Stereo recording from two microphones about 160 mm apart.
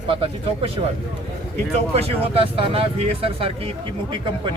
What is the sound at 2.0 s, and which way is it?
Speech, 35° right (ahead or behind).